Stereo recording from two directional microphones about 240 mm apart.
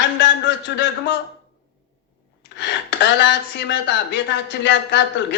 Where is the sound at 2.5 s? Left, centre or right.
Left.